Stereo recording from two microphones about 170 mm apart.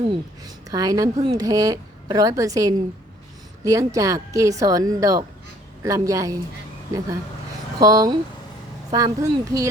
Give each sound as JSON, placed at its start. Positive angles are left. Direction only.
{"t": 0.7, "sound": "speech", "side_deg": -20}
{"t": 7.8, "sound": "speech", "side_deg": -20}